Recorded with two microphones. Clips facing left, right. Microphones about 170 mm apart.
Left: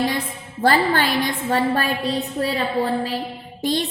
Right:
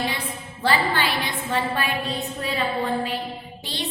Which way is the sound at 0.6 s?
45° left (ahead or behind).